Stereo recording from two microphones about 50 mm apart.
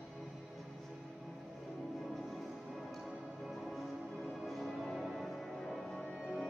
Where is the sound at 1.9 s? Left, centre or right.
Centre.